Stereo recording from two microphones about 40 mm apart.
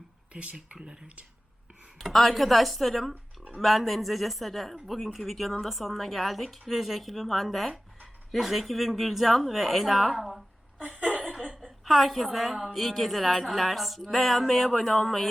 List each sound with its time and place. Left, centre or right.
2.0 s a woman's voice: centre
10.9 s chuckle: right
11.4 s a sound: right
11.9 s a woman's voice: centre